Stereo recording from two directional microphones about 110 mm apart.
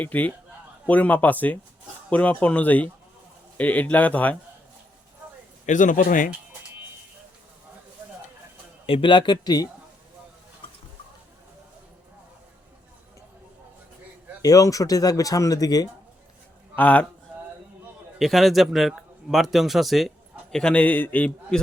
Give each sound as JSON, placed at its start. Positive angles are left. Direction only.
{"t": 0.0, "sound": "a man's voice", "side_deg": 15}
{"t": 5.7, "sound": "speech", "side_deg": 90}
{"t": 8.9, "sound": "speech", "side_deg": 50}
{"t": 14.4, "sound": "speech", "side_deg": 30}
{"t": 16.7, "sound": "a man's voice", "side_deg": 15}
{"t": 18.2, "sound": "a man's voice", "side_deg": 0}